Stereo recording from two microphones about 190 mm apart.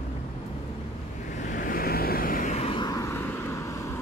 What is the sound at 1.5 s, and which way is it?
Vehicle, 50° left (ahead or behind).